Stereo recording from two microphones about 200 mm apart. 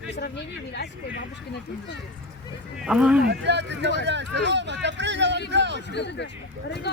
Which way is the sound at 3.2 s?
60° right (ahead or behind).